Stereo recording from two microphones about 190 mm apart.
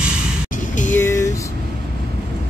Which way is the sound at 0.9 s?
15° left (ahead or behind).